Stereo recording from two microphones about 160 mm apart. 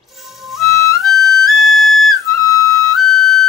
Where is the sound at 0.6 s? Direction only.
20° left (ahead or behind).